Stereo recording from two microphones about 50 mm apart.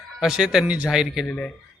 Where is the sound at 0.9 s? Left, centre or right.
Centre.